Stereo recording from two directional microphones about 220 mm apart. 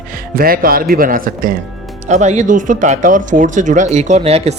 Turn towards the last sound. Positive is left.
turn(degrees=-25)  # may be behind; listen again after turning